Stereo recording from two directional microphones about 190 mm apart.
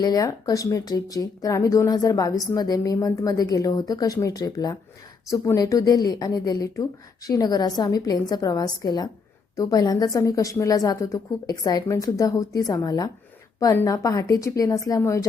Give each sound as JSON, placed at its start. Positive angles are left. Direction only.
{"t": 0.0, "sound": "a woman's voice", "side_deg": 20}